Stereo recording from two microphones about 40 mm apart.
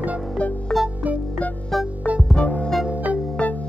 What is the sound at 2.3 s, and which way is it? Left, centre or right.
Music, left.